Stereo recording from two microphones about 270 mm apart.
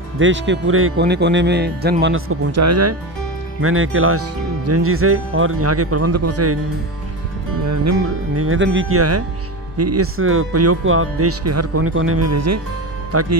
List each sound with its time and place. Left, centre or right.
0.2 s speech: right
2.6 s speech: right
3.6 s speech: right
7.6 s speech: right
8.4 s speech: right